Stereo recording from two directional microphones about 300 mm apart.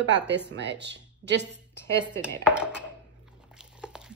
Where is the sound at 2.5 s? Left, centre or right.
Centre.